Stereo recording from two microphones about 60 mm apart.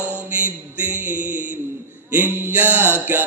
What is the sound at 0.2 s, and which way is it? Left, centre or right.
Music, right.